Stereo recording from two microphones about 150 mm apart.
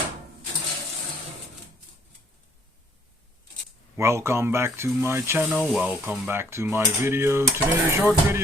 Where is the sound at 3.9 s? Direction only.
20° right (ahead or behind).